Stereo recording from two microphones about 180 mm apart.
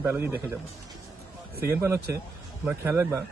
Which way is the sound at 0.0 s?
15° right (ahead or behind).